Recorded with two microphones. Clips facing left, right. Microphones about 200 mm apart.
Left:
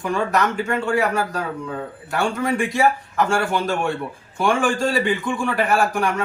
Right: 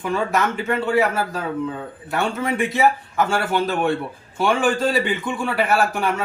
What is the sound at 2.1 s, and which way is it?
A man's voice, centre (ahead or behind).